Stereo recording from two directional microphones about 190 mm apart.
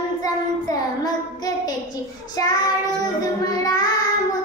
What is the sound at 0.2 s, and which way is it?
Child singing, 20° left (ahead or behind).